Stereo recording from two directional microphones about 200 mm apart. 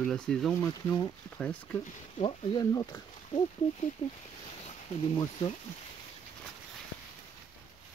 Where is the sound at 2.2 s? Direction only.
25° left (ahead or behind).